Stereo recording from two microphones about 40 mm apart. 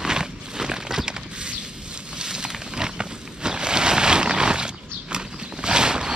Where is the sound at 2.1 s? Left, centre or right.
Centre.